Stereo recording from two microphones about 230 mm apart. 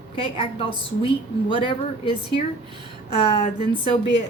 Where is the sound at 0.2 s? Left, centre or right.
Left.